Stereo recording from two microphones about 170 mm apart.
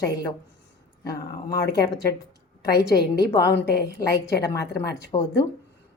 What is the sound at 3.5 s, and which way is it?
Speech, 80° left.